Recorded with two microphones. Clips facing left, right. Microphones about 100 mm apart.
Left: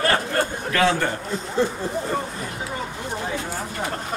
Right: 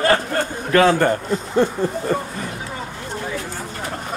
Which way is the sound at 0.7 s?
45° right (ahead or behind).